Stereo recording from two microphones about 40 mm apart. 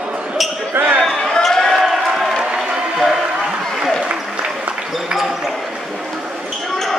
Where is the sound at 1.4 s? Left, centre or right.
Centre.